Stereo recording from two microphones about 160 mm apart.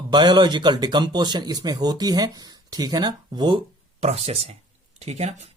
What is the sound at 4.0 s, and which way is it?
Speech, 40° right (ahead or behind).